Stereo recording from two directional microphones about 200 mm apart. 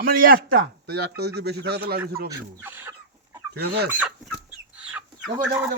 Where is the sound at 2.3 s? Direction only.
15° right (ahead or behind).